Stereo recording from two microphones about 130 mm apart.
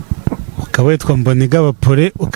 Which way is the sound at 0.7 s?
15° right (ahead or behind).